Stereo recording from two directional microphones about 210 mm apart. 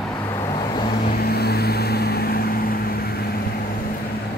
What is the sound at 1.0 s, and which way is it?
Vehicle, 45° left (ahead or behind).